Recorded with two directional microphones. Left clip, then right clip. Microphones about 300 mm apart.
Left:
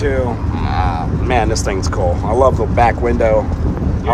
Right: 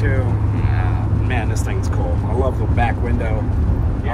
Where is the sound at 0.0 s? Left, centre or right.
Centre.